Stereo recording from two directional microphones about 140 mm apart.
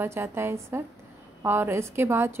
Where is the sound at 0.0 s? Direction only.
20° right (ahead or behind).